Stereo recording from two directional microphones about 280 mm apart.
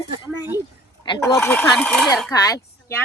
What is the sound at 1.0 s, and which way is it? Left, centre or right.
Speech, centre.